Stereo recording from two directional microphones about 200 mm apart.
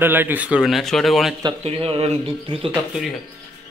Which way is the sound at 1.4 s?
25° right (ahead or behind).